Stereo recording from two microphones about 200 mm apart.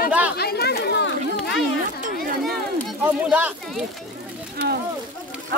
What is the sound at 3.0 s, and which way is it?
Speech, 10° right (ahead or behind).